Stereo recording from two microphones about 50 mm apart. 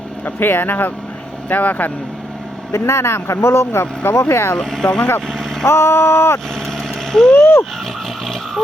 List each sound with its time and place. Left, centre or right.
0.3 s speech: left
2.7 s speech: left
4.6 s speech: centre
5.6 s speech: left
7.1 s speech: centre